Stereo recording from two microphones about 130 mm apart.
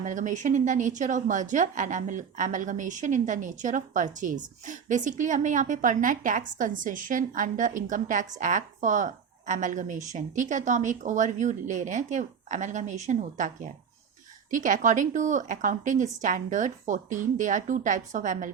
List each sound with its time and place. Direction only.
0.0 s a woman's voice: 75° right (ahead or behind)